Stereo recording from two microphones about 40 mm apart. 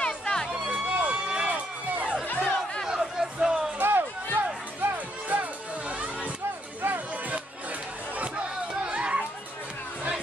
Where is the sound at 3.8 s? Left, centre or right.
Right.